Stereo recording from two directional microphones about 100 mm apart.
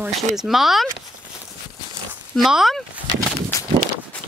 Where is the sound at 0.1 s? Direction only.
Centre (ahead or behind).